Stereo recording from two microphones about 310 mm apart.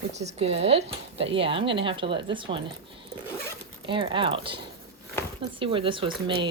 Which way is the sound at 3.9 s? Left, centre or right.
Centre.